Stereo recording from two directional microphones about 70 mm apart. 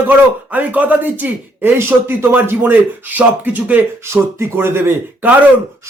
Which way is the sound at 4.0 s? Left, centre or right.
Right.